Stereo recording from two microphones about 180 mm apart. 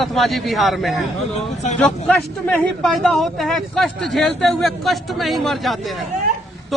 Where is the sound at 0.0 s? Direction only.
Centre (ahead or behind).